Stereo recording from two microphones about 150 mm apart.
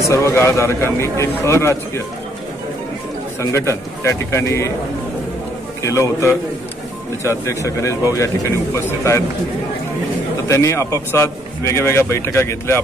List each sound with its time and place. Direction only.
0.0 s a man's voice: 20° left (ahead or behind)
3.3 s a man's voice: 20° left (ahead or behind)
5.8 s a man's voice: 20° left (ahead or behind)
10.5 s a man's voice: 20° left (ahead or behind)